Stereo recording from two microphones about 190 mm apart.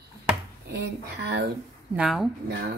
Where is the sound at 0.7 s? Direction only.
60° right (ahead or behind).